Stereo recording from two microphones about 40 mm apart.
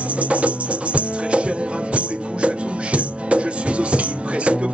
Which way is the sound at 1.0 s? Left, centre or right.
Right.